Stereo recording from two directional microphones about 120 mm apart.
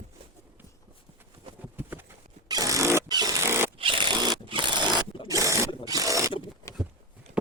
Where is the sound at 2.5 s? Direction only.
30° right (ahead or behind).